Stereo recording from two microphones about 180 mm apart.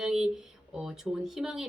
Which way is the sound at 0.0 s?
5° right (ahead or behind).